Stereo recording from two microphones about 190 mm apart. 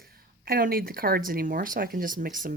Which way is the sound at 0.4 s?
50° right (ahead or behind).